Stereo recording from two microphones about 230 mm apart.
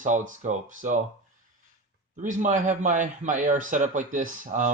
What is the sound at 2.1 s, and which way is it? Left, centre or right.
Speech, right.